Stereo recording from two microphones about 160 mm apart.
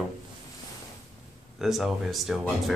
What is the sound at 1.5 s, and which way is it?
Speech, centre (ahead or behind).